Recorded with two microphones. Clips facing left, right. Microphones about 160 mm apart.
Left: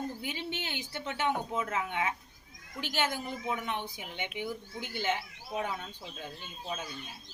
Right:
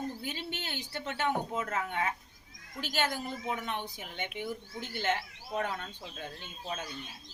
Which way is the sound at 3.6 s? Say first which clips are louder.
Left 1 dB; 15° left (ahead or behind).